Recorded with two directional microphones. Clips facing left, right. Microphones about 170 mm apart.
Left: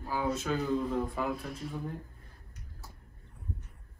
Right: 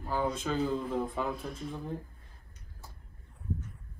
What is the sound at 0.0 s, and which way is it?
Speech, 5° left (ahead or behind).